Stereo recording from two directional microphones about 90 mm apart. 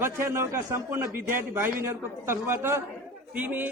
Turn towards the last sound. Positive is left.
turn(degrees=-20)  # may be behind; listen again after turning